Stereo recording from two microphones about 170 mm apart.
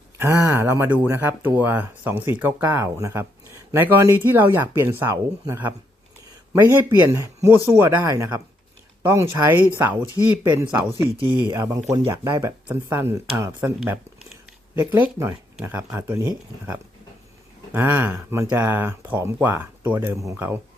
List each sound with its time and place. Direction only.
0.2 s speech: 15° right (ahead or behind)
11.2 s speech: 25° right (ahead or behind); by 14.0 s 10° right (ahead or behind)
15.0 s speech: 15° right (ahead or behind)
17.7 s speech: 10° right (ahead or behind)